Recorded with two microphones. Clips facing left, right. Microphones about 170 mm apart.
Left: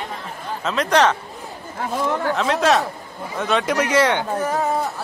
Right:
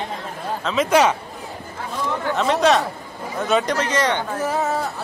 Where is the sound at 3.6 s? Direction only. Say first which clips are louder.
Left 3 dB; 10° left (ahead or behind).